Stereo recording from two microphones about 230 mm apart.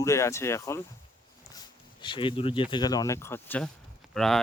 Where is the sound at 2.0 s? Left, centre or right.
Left.